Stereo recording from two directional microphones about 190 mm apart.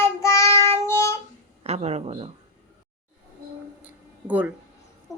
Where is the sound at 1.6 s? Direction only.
35° right (ahead or behind).